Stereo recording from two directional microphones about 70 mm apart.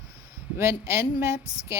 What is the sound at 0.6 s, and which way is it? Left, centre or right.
A woman's voice, right.